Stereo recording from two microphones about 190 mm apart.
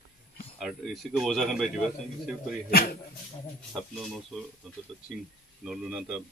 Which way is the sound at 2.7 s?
50° left (ahead or behind).